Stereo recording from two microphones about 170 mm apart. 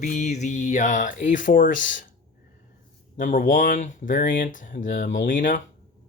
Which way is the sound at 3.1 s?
45° left (ahead or behind).